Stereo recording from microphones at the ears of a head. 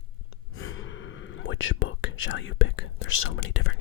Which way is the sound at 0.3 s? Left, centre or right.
Left.